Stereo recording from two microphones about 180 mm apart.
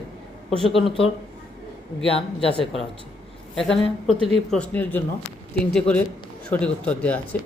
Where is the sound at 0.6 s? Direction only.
Centre (ahead or behind).